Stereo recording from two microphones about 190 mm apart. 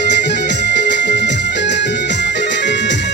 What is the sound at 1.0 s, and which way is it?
Music, 70° left (ahead or behind).